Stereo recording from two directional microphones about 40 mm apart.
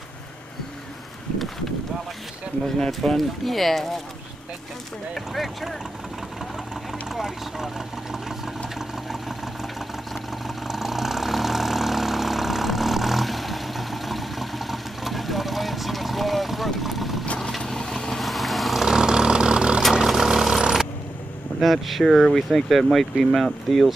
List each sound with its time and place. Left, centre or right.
3.1 s speech: centre
5.1 s speech: centre
7.1 s speech: centre
10.4 s vehicle: centre
17.4 s vehicle: centre
18.9 s engine: centre
19.9 s vehicle: centre
21.5 s speech: centre